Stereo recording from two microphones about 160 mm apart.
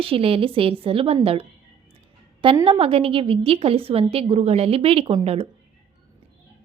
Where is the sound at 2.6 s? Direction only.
35° right (ahead or behind).